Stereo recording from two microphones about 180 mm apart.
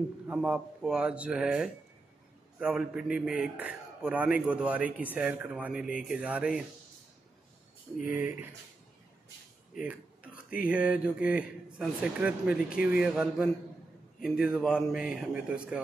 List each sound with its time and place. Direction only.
0.3 s a man's voice: 5° right (ahead or behind)
8.0 s a man's voice: 10° right (ahead or behind)
10.3 s a sound: 55° left (ahead or behind)
10.7 s a man's voice: 5° right (ahead or behind)